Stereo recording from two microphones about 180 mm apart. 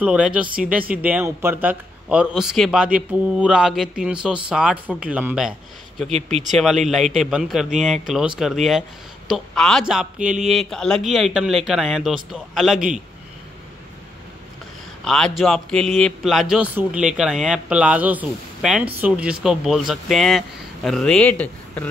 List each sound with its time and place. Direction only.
0.0 s speech: 5° right (ahead or behind)
6.5 s speech: centre (ahead or behind)
15.0 s speech: 5° left (ahead or behind)